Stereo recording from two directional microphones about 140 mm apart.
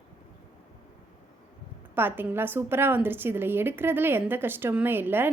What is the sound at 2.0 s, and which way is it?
A woman's voice, 15° right (ahead or behind).